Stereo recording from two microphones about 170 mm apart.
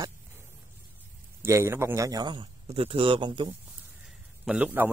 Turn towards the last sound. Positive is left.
turn(degrees=-10)  # may be behind; listen again after turning